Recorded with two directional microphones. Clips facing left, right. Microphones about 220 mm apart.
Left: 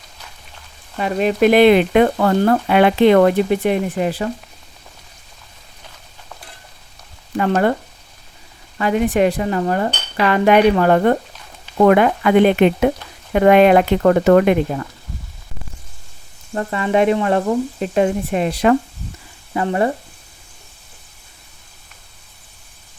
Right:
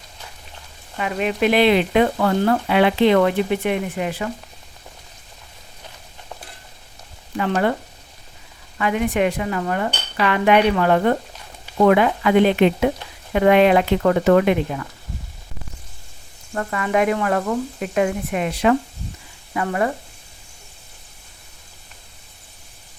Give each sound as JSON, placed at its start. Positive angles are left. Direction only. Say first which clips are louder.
{"t": 0.9, "sound": "speech", "louder": "left 5 dB", "side_deg": 35}
{"t": 7.3, "sound": "speech", "louder": "left 4 dB", "side_deg": 45}
{"t": 8.8, "sound": "dishes", "louder": "left 4 dB", "side_deg": 35}
{"t": 11.8, "sound": "speech", "louder": "left 3 dB", "side_deg": 50}
{"t": 16.6, "sound": "speech", "louder": "left 3 dB", "side_deg": 25}
{"t": 19.5, "sound": "speech", "louder": "left 3 dB", "side_deg": 30}